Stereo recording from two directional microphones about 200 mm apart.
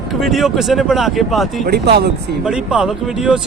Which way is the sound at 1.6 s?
55° right (ahead or behind).